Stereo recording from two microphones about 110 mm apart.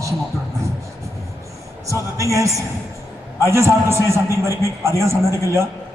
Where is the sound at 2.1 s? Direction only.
30° right (ahead or behind).